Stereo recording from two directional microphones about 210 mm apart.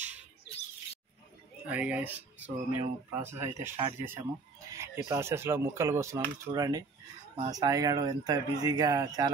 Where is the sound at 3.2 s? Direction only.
10° right (ahead or behind).